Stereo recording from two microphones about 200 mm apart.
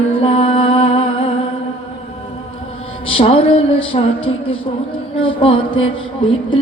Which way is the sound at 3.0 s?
30° left (ahead or behind).